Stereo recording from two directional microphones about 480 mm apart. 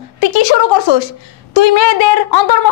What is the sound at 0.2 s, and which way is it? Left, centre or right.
A woman's voice, left.